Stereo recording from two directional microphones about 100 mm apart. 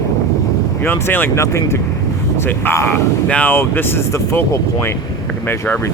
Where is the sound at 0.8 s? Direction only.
20° left (ahead or behind).